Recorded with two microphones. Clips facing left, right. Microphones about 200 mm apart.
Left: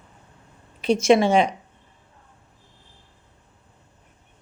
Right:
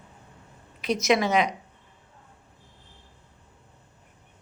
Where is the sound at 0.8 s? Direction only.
30° left (ahead or behind).